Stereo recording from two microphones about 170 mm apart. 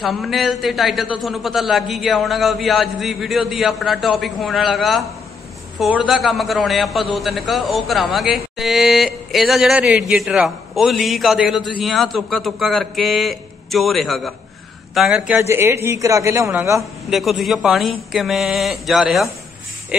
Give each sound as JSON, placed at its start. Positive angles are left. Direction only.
{"t": 0.0, "sound": "a man's voice", "side_deg": 0}
{"t": 15.3, "sound": "a man's voice", "side_deg": -15}
{"t": 17.1, "sound": "a man's voice", "side_deg": 0}